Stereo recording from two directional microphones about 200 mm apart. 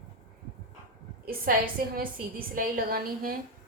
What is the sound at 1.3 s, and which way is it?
A woman's voice, 45° right (ahead or behind).